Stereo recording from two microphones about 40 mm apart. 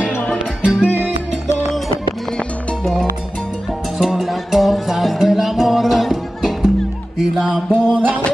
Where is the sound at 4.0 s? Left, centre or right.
Centre.